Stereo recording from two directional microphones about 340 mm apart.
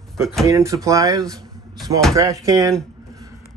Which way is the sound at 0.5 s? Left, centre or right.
Centre.